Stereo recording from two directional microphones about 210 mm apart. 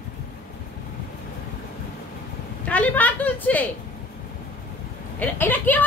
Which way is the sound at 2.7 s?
5° left (ahead or behind).